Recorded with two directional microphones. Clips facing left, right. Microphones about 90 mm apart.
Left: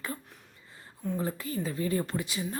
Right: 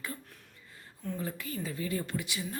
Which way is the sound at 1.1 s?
30° left (ahead or behind).